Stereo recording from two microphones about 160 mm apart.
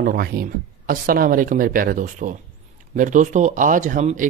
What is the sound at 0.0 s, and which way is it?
Speech, 70° right (ahead or behind).